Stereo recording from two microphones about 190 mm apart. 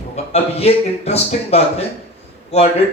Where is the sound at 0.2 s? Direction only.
35° left (ahead or behind).